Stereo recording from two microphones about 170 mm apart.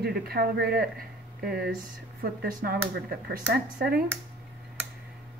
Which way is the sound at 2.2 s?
60° right (ahead or behind).